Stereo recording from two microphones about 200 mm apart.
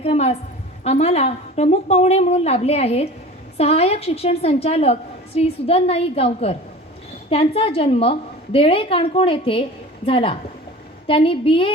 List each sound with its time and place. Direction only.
0.0 s a woman's voice: 30° left (ahead or behind)